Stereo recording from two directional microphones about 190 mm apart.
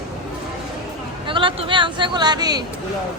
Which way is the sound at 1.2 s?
25° right (ahead or behind).